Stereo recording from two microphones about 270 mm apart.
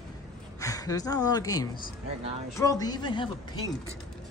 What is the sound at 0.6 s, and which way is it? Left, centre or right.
A woman's voice, centre.